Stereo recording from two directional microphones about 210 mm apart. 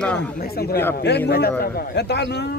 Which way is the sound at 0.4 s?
45° left (ahead or behind).